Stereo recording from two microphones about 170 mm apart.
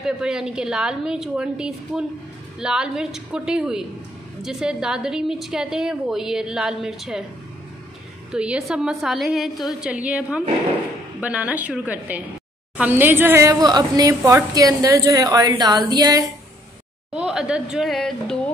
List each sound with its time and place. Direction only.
0.0 s a woman's voice: 5° right (ahead or behind)
8.3 s a woman's voice: 5° right (ahead or behind); by 16.3 s 25° right (ahead or behind)
17.1 s a woman's voice: 5° right (ahead or behind)